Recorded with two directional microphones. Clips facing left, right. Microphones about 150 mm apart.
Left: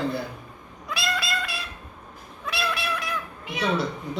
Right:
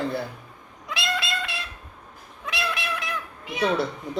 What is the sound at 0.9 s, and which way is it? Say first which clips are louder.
Cat: even; 20° right (ahead or behind).